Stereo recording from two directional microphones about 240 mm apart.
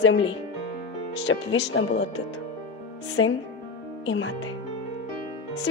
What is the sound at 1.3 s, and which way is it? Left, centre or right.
Speech, left.